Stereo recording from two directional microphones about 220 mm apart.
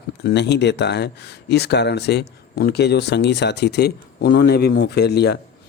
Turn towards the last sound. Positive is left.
turn(degrees=50)  # may be behind; listen again after turning